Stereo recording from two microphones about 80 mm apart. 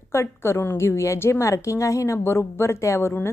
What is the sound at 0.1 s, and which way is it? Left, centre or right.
A woman's voice, left.